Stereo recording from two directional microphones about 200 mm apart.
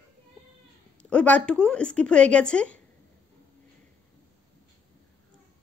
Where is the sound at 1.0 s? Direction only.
5° left (ahead or behind).